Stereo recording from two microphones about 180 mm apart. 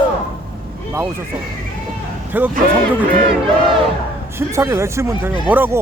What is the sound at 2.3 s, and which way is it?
Speech, 10° right (ahead or behind).